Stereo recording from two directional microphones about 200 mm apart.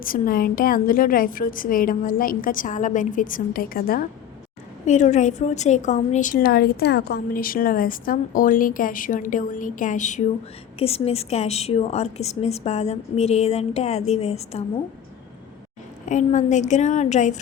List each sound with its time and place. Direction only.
0.0 s a woman's voice: 45° left (ahead or behind)
4.9 s a woman's voice: 35° left (ahead or behind)
16.0 s a woman's voice: 35° left (ahead or behind)